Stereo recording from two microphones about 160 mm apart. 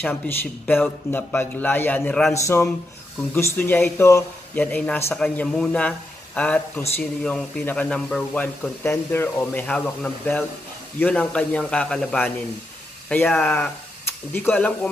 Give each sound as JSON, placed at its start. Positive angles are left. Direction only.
{"t": 0.0, "sound": "speech", "side_deg": 10}